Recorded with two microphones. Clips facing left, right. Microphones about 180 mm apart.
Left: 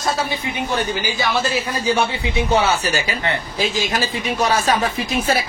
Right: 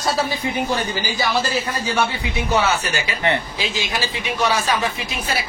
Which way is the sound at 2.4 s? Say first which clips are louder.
Left 2 dB; 25° left (ahead or behind).